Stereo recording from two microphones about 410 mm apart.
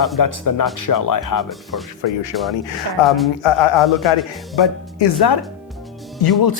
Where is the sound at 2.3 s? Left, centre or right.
Left.